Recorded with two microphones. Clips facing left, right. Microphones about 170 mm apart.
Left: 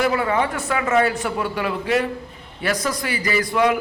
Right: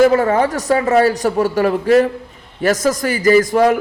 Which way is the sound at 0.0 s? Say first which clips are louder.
Right 8 dB; 45° right (ahead or behind).